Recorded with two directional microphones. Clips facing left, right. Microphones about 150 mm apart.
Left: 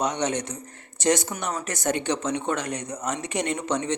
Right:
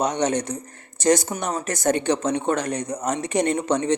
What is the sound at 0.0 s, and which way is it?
Speech, 40° right (ahead or behind).